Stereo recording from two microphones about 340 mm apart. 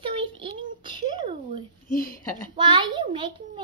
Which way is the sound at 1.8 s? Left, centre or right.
Left.